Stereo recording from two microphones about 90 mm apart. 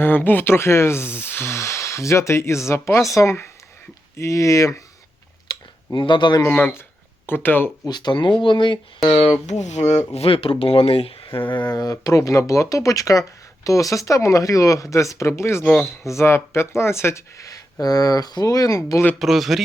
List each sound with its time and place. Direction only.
0.0 s speech: 20° left (ahead or behind)
5.5 s a sound: 60° left (ahead or behind)
6.5 s speech: 15° left (ahead or behind)
7.9 s speech: 55° left (ahead or behind)
9.0 s speech: 90° left
11.5 s speech: 50° left (ahead or behind); by 15.6 s 30° left (ahead or behind)
15.6 s speech: 10° left (ahead or behind)
16.0 s speech: 30° left (ahead or behind)
19.2 s speech: centre (ahead or behind)